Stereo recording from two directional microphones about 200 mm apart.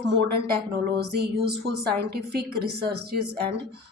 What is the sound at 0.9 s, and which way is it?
A woman's voice, 55° right (ahead or behind).